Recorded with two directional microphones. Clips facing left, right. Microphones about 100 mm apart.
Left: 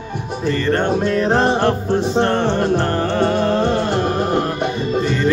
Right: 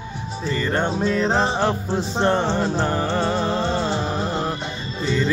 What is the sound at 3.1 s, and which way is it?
Music, 15° right (ahead or behind).